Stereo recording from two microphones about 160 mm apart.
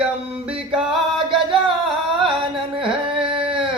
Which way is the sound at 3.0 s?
30° right (ahead or behind).